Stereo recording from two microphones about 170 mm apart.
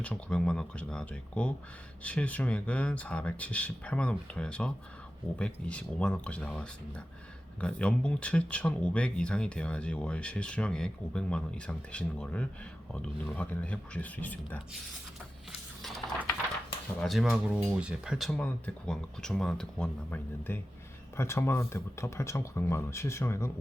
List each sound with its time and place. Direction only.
0.0 s speech: 5° left (ahead or behind)
17.0 s speech: centre (ahead or behind)
18.3 s speech: 5° left (ahead or behind)